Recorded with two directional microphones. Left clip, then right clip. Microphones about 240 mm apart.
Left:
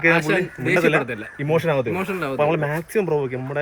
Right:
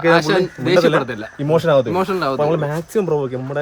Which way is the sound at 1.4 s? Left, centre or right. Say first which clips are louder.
Right 6 dB; centre.